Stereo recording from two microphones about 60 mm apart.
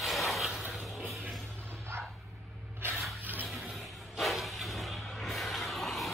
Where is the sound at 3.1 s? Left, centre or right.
Right.